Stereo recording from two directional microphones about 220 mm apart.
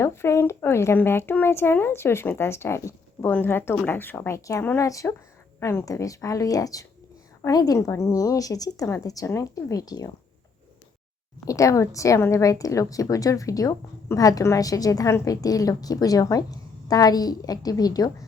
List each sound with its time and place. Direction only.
0.0 s a woman's voice: 10° left (ahead or behind)
11.4 s a woman's voice: 15° left (ahead or behind)